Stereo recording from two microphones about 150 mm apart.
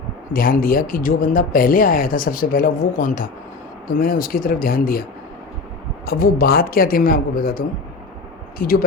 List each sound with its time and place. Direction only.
0.3 s speech: 70° left (ahead or behind)
6.1 s speech: 80° left